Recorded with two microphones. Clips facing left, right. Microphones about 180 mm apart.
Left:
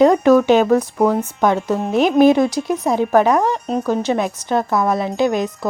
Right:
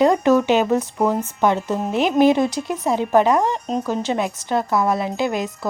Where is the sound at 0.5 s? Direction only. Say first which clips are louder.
Left 4 dB; 15° right (ahead or behind).